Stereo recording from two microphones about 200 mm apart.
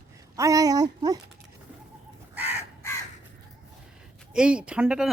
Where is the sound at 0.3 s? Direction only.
15° right (ahead or behind).